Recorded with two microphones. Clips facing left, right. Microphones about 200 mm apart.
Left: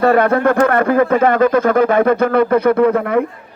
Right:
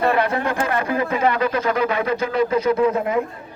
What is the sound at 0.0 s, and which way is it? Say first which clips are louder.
Speech: left 7 dB; 50° left (ahead or behind).